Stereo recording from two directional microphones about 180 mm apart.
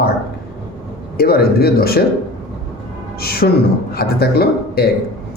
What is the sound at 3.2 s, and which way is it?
Speech, 55° left (ahead or behind).